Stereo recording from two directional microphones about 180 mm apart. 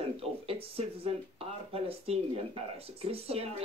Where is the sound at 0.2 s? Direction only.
35° right (ahead or behind).